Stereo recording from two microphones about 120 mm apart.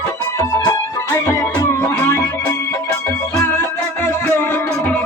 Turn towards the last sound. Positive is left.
turn(degrees=15)  # may be behind; listen again after turning